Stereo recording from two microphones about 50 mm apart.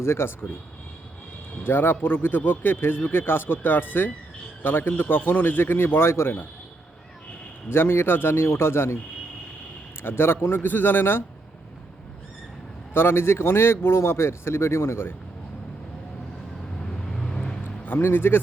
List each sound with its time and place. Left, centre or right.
0.0 s speech: left
1.6 s a man's voice: left
7.7 s a man's voice: left
10.0 s a man's voice: left
12.9 s speech: left
16.8 s vehicle: centre
17.6 s music: left